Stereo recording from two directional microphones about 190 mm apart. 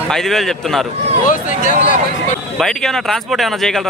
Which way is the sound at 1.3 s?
45° left (ahead or behind).